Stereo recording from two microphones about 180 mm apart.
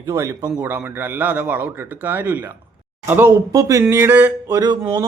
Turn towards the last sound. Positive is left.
turn(degrees=-20)  # may be behind; listen again after turning